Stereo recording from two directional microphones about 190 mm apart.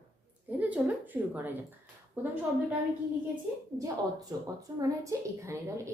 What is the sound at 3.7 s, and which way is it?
A woman's voice, 20° right (ahead or behind).